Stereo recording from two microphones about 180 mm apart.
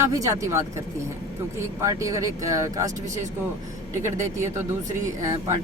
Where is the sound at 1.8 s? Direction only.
15° right (ahead or behind).